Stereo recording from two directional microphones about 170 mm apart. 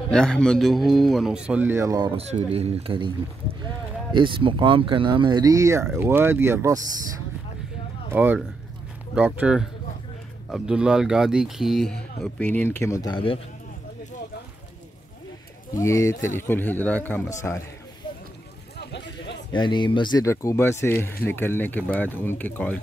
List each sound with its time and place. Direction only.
0.1 s a man's voice: 5° left (ahead or behind); by 2.1 s 20° right (ahead or behind)
2.1 s speech: 40° right (ahead or behind)
4.1 s speech: 30° right (ahead or behind)
8.1 s a man's voice: 10° right (ahead or behind); by 13.4 s 30° left (ahead or behind)
15.7 s speech: 15° left (ahead or behind)
18.8 s a sound: 85° left
19.5 s speech: 25° left (ahead or behind); by 22.8 s 10° left (ahead or behind)